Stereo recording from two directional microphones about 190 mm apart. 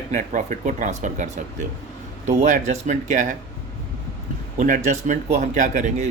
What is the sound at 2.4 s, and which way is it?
Speech, 40° right (ahead or behind).